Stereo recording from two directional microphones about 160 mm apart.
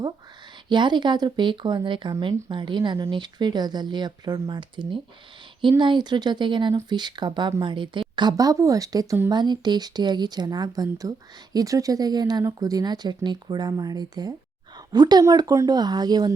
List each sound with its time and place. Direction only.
0.7 s speech: 30° right (ahead or behind)